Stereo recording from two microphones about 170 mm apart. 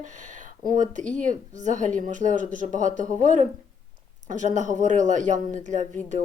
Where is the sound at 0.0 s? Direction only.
45° right (ahead or behind).